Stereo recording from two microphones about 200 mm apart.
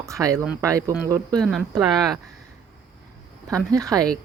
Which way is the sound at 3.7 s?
15° right (ahead or behind).